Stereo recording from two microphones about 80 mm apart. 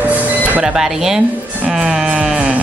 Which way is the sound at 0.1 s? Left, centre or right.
Centre.